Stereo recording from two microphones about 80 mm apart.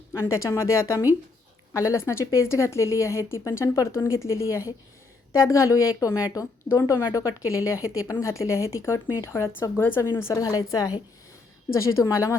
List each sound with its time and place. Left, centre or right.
0.1 s speech: left
10.4 s a woman's voice: left